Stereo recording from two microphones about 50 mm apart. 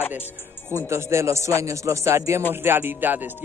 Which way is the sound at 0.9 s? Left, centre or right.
Right.